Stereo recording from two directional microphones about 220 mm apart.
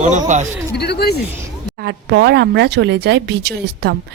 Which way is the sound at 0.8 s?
50° left (ahead or behind).